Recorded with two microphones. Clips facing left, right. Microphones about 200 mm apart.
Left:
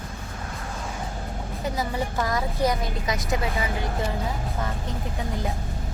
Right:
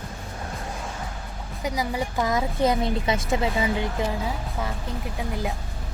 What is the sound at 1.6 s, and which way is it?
A woman's voice, 15° right (ahead or behind).